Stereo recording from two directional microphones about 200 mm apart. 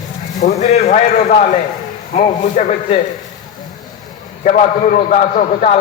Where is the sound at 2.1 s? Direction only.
35° left (ahead or behind).